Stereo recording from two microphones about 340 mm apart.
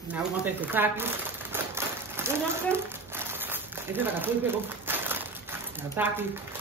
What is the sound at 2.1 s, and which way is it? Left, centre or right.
Speech, centre.